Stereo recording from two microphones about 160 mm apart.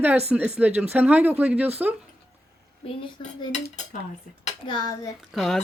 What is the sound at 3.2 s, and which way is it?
Cutlery, 35° left (ahead or behind).